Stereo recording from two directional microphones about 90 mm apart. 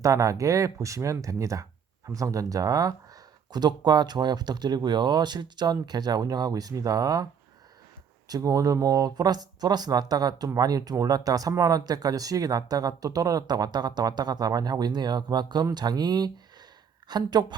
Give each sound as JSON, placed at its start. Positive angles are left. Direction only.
{"t": 0.0, "sound": "speech", "side_deg": -35}
{"t": 8.3, "sound": "speech", "side_deg": -40}